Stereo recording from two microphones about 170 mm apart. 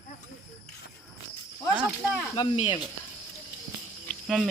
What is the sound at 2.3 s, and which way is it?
Speech, 35° left (ahead or behind).